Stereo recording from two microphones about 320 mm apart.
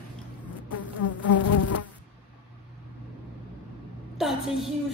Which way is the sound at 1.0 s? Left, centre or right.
Left.